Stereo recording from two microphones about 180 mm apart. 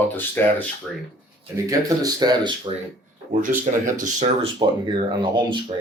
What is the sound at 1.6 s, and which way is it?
Speech, 20° right (ahead or behind).